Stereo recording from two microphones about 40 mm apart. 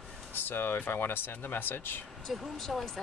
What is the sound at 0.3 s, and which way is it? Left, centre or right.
Speech, left.